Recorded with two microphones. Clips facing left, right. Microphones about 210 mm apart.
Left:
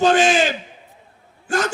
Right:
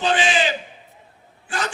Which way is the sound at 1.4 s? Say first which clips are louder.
Left 6 dB; 45° left (ahead or behind).